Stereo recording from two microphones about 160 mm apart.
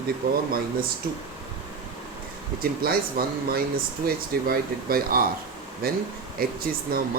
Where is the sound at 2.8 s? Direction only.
70° right (ahead or behind).